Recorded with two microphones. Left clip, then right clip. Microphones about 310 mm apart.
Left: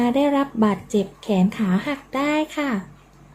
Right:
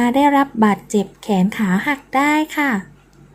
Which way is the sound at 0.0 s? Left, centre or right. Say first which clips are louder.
Right 5 dB; centre.